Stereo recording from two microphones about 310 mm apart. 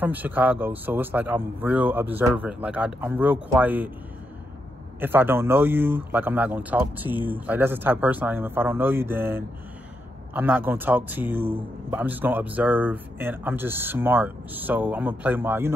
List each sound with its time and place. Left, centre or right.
0.0 s a man's voice: centre
5.0 s a man's voice: centre